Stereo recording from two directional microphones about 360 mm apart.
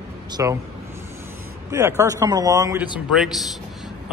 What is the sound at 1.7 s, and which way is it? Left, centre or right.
A man's voice, centre.